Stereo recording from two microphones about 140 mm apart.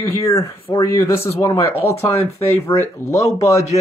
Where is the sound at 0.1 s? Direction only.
20° left (ahead or behind).